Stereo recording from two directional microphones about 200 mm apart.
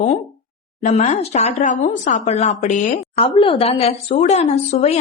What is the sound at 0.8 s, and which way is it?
A woman's voice, 35° left (ahead or behind).